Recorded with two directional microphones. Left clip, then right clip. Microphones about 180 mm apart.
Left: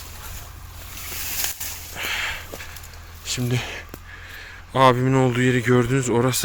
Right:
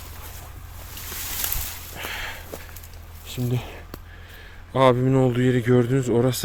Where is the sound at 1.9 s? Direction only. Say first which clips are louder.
Left 6 dB; 20° right (ahead or behind).